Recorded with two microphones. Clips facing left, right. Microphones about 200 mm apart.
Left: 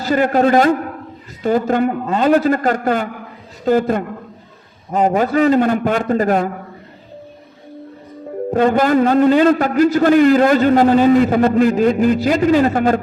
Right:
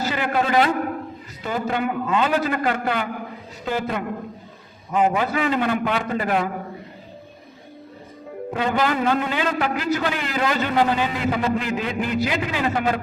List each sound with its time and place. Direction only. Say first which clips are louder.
0.0 s a man's voice: left 9 dB; 40° left (ahead or behind)
8.4 s a man's voice: left 8 dB; 45° left (ahead or behind)